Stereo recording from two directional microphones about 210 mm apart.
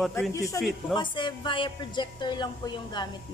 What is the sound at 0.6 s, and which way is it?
Speech, 15° left (ahead or behind).